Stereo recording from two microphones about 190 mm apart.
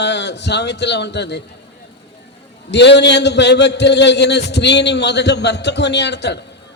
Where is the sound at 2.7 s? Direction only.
65° left (ahead or behind).